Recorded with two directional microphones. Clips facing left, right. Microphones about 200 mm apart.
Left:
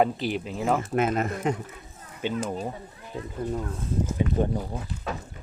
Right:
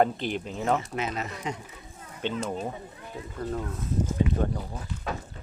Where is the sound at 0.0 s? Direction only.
5° left (ahead or behind).